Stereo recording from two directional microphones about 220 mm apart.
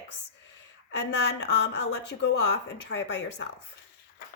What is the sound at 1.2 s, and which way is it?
Speech, 50° left (ahead or behind).